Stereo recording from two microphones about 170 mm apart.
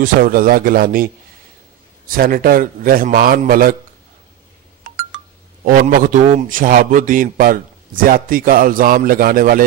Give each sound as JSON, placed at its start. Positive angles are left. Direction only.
{"t": 0.0, "sound": "a man's voice", "side_deg": -55}
{"t": 5.7, "sound": "a man's voice", "side_deg": -50}